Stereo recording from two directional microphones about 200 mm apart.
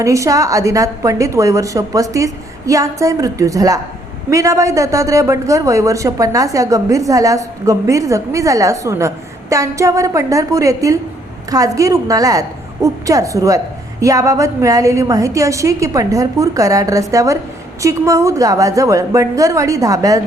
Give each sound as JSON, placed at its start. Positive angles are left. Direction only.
{"t": 0.0, "sound": "a woman's voice", "side_deg": -15}